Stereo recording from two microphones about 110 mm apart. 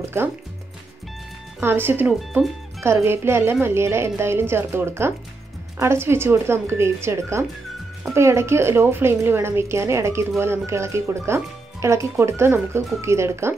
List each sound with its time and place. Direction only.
0.0 s speech: 20° right (ahead or behind)
1.6 s a woman's voice: 20° right (ahead or behind)